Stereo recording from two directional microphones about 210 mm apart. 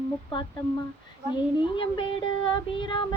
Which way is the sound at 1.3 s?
25° left (ahead or behind).